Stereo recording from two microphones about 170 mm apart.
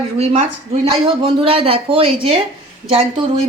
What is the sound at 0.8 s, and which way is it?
A woman's voice, 35° right (ahead or behind).